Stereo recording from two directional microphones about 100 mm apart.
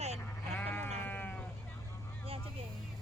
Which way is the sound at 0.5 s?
15° left (ahead or behind).